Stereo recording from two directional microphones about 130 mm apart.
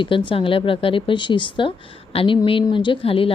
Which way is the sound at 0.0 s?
40° left (ahead or behind).